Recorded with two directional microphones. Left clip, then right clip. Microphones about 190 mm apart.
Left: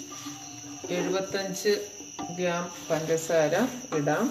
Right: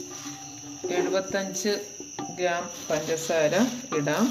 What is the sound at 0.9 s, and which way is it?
Speech, 60° right (ahead or behind).